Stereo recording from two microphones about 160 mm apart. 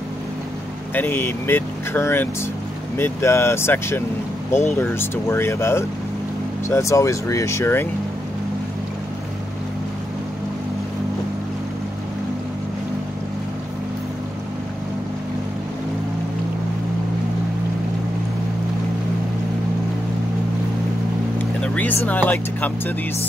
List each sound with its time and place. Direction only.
0.9 s speech: 15° left (ahead or behind)
21.4 s vehicle: 10° left (ahead or behind)